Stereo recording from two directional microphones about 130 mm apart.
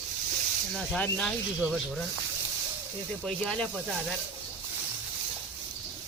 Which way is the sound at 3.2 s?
5° left (ahead or behind).